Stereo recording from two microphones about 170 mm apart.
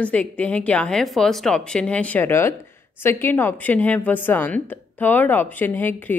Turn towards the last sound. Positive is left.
turn(degrees=10)  # may be behind; listen again after turning